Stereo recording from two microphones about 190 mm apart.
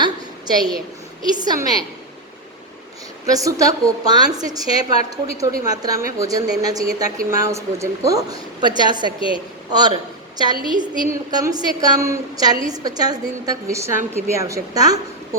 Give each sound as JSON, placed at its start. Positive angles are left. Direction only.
{"t": 0.0, "sound": "a sound", "side_deg": -20}
{"t": 1.2, "sound": "speech", "side_deg": -20}
{"t": 3.2, "sound": "a woman's voice", "side_deg": -20}
{"t": 10.5, "sound": "a woman's voice", "side_deg": 25}
{"t": 11.1, "sound": "a woman's voice", "side_deg": -15}